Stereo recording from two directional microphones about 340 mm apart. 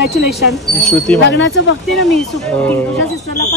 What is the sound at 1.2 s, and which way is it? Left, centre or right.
Speech, left.